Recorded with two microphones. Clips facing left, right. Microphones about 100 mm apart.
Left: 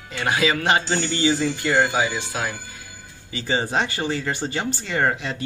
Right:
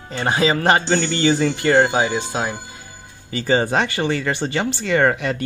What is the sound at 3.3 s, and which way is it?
Speech, 45° right (ahead or behind).